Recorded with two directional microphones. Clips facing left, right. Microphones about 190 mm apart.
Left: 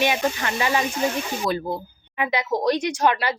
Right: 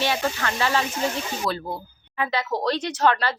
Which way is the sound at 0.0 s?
15° left (ahead or behind).